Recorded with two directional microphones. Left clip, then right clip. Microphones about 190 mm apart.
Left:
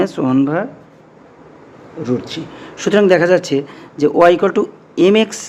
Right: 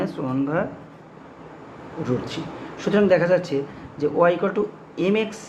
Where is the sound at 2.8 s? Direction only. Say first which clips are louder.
Left 7 dB; 50° left (ahead or behind).